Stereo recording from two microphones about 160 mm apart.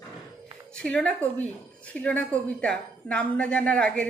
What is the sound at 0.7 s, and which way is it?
A woman's voice, 5° left (ahead or behind).